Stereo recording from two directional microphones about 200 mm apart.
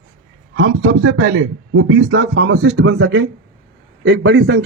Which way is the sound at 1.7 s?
85° right.